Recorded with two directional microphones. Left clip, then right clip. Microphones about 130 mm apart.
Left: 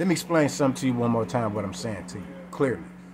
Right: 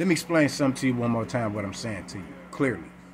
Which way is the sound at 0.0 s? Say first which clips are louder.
Even; 20° left (ahead or behind).